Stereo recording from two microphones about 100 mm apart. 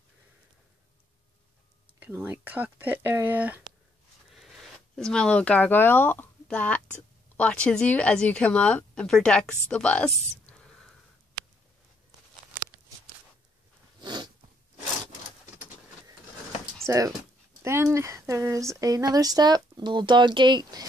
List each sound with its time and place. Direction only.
2.0 s speech: 20° right (ahead or behind)
4.3 s a woman's voice: centre (ahead or behind)
14.0 s a sound: 45° right (ahead or behind)
16.8 s speech: 30° right (ahead or behind); by 20.8 s 50° right (ahead or behind)